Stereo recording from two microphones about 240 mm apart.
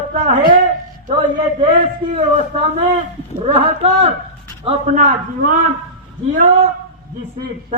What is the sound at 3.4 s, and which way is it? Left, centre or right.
A man's voice, right.